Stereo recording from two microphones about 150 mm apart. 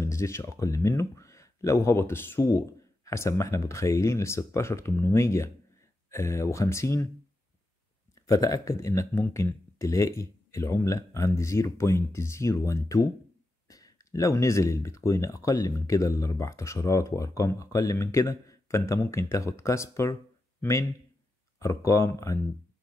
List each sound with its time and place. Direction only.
0.0 s speech: 20° left (ahead or behind)
8.1 s speech: 20° left (ahead or behind)
21.5 s speech: 20° left (ahead or behind)